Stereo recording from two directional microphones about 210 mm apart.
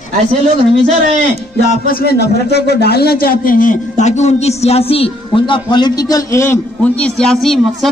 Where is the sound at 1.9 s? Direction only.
45° left (ahead or behind).